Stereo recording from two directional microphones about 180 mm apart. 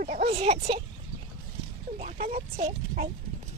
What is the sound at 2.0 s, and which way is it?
Speech, 50° right (ahead or behind).